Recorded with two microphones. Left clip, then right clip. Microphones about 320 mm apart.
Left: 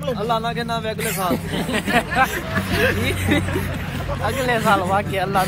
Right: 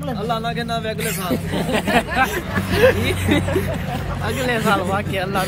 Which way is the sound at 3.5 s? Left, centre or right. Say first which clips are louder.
Right 4 dB; right.